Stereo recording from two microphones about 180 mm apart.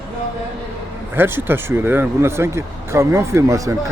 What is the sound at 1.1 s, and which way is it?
Speech, 10° right (ahead or behind).